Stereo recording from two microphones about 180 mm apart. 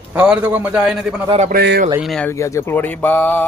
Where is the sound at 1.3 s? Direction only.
35° right (ahead or behind).